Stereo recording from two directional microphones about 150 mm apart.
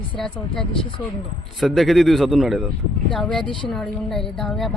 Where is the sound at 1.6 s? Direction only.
Centre (ahead or behind).